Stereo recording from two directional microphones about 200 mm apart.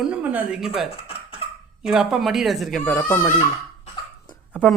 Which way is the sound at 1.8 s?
Centre (ahead or behind).